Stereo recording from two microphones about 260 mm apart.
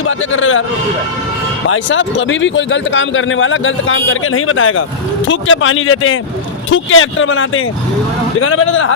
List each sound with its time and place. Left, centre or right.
0.0 s speech: left
1.6 s speech: left